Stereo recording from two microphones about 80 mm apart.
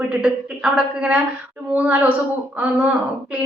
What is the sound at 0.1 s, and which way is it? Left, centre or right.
A woman's voice, centre.